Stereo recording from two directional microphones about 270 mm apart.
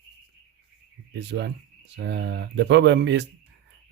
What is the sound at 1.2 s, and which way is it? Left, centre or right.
Speech, right.